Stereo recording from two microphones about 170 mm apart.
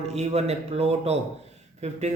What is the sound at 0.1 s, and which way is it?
Speech, 40° right (ahead or behind).